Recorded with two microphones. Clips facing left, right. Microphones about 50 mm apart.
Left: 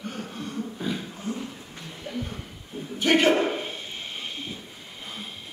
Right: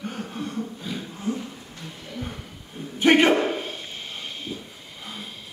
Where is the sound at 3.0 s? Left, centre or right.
Centre.